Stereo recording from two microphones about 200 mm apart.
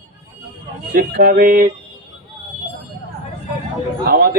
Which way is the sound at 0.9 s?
45° right (ahead or behind).